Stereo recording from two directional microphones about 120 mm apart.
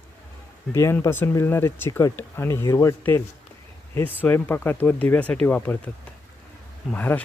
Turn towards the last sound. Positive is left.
turn(degrees=15)  # may be behind; listen again after turning